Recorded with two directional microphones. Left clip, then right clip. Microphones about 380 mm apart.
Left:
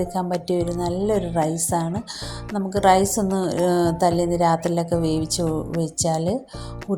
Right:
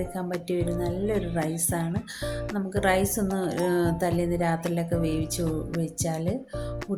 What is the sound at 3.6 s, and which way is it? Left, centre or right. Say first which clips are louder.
Music: left 7 dB; right.